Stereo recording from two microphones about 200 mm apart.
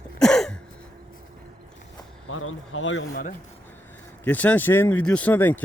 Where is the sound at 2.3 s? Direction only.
85° left; by 3.1 s 70° left (ahead or behind).